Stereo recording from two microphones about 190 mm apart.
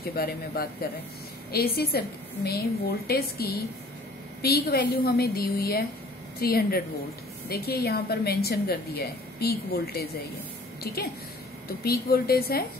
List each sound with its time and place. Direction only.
0.0 s a woman's voice: 55° left (ahead or behind)